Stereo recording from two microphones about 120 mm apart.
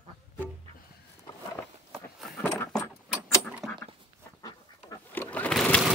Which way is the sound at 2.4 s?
10° left (ahead or behind).